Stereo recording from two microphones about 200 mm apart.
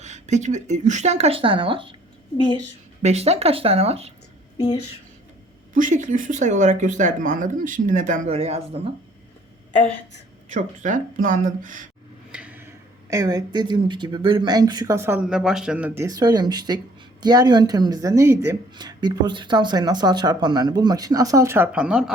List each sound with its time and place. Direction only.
0.0 s speech: 35° right (ahead or behind)
3.0 s speech: 35° right (ahead or behind)
4.5 s speech: 20° left (ahead or behind)
5.7 s speech: 40° right (ahead or behind)
10.5 s speech: 40° right (ahead or behind)
12.3 s speech: 5° right (ahead or behind)
16.0 s speech: 20° right (ahead or behind)